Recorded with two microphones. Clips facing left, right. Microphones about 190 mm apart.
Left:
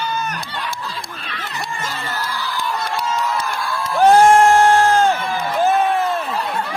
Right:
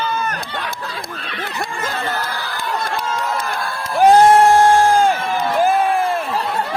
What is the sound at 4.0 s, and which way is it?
Crowd, 15° right (ahead or behind).